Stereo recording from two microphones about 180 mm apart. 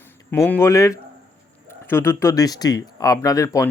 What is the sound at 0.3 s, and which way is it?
Speech, 10° left (ahead or behind).